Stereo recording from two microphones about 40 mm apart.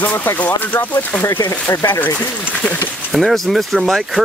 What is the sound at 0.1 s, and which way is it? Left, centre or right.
Speech, left.